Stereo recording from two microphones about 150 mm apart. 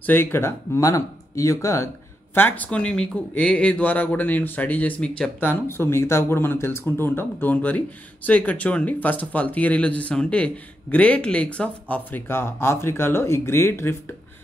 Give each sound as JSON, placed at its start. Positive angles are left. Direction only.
{"t": 0.0, "sound": "speech", "side_deg": 15}